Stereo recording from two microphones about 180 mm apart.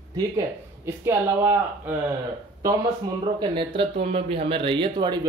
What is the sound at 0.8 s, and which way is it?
Speech, 15° right (ahead or behind).